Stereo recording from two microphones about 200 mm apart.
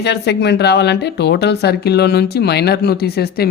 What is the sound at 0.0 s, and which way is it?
Speech, 55° left (ahead or behind).